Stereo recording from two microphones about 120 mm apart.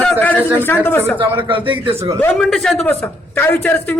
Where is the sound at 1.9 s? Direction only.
25° right (ahead or behind).